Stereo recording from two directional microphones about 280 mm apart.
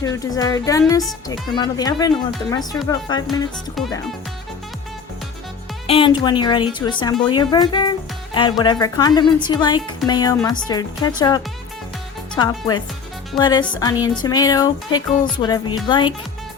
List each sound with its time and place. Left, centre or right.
0.0 s speech: centre
3.8 s speech: centre
5.9 s speech: centre